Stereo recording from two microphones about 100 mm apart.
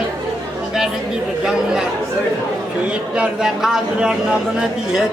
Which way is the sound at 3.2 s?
5° right (ahead or behind).